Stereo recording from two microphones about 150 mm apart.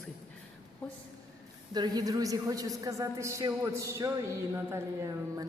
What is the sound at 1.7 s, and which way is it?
A woman's voice, 25° right (ahead or behind).